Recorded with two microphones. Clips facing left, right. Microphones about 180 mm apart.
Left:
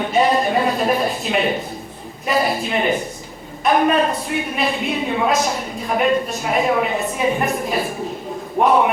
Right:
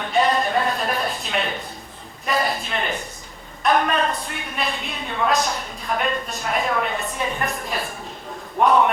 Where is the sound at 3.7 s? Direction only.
Centre (ahead or behind).